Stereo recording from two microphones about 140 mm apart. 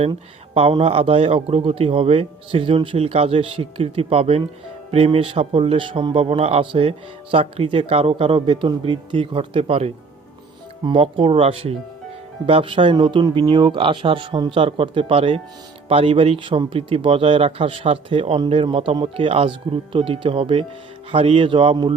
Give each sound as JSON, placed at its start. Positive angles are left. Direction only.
{"t": 0.1, "sound": "a man's voice", "side_deg": -40}